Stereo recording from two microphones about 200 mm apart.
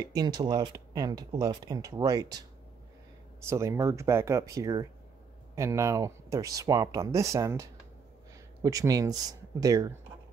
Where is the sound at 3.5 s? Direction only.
15° right (ahead or behind).